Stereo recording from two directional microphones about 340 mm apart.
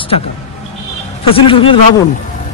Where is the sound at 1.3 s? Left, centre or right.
Centre.